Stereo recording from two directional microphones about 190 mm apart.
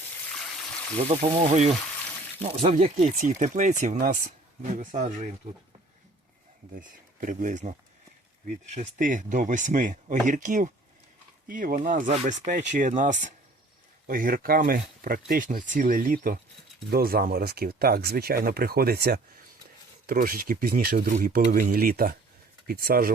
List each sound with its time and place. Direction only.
1.3 s speech: 35° right (ahead or behind)
6.7 s speech: 45° right (ahead or behind)